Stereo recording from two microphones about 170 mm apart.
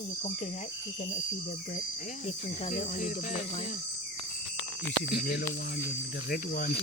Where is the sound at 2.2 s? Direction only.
40° left (ahead or behind).